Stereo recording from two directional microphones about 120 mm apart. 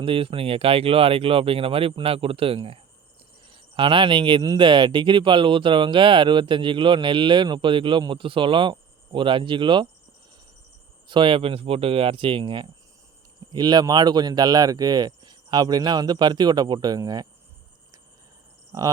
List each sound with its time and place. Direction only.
0.0 s speech: 50° right (ahead or behind)
11.1 s speech: 45° right (ahead or behind)